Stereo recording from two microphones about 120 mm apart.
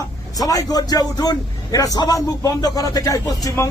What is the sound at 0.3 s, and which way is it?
A man's voice, 30° left (ahead or behind).